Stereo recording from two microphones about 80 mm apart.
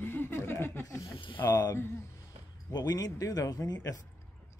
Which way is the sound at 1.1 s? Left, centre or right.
Left.